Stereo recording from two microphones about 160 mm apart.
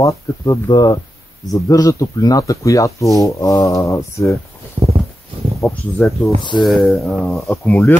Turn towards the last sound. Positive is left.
turn(degrees=10)  # may be behind; listen again after turning